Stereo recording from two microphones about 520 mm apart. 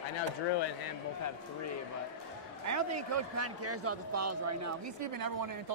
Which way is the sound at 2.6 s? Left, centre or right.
Right.